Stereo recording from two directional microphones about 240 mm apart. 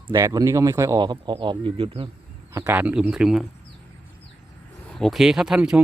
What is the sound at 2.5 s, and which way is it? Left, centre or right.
Speech, centre.